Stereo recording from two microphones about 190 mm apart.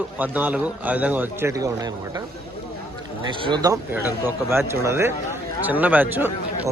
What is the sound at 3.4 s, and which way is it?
Speech, 20° right (ahead or behind).